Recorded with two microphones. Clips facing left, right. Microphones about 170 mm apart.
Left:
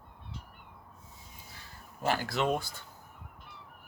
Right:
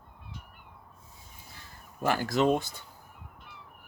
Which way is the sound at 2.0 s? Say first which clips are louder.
Right 4 dB; 45° right (ahead or behind).